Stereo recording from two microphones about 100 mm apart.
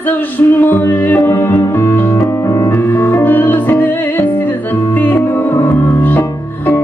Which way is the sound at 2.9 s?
20° left (ahead or behind).